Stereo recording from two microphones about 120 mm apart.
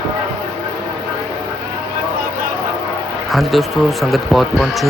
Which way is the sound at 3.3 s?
Centre (ahead or behind).